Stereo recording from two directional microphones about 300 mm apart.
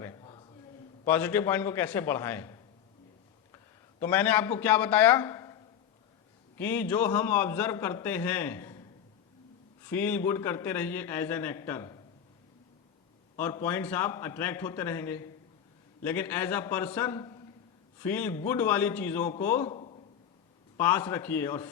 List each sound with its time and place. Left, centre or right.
0.0 s a sound: centre
1.0 s a man's voice: centre
4.0 s a man's voice: centre
6.6 s a man's voice: centre
9.8 s a man's voice: centre
13.3 s a man's voice: centre
19.7 s a sound: centre
20.7 s a man's voice: centre